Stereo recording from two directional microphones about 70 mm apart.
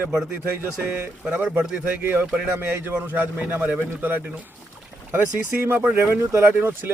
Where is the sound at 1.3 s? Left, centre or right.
Centre.